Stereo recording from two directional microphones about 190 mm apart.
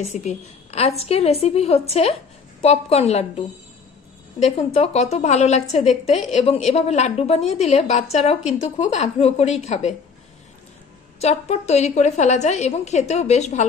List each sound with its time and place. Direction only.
0.0 s a woman's voice: 35° left (ahead or behind)
11.1 s a woman's voice: 35° left (ahead or behind)